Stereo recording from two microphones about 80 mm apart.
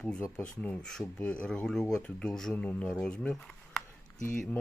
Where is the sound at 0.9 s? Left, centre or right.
Centre.